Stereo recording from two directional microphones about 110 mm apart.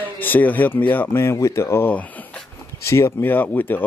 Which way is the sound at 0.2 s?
15° left (ahead or behind).